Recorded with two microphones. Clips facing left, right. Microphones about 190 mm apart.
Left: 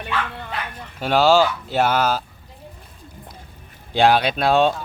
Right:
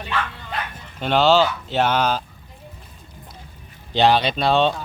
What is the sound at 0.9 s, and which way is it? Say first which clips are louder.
Speech: left 1 dB; 10° left (ahead or behind).